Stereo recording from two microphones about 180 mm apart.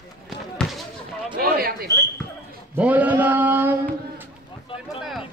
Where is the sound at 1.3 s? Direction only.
55° right (ahead or behind).